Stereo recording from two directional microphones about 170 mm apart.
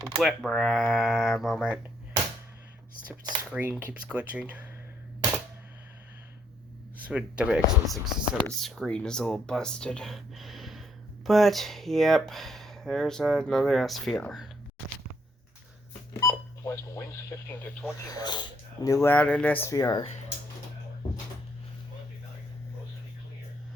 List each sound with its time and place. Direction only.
0.2 s speech: centre (ahead or behind)
3.5 s speech: 10° right (ahead or behind)
6.9 s speech: 10° right (ahead or behind)
16.2 s speech: 15° left (ahead or behind)
18.0 s speech: 25° left (ahead or behind)
19.1 s speech: 10° left (ahead or behind)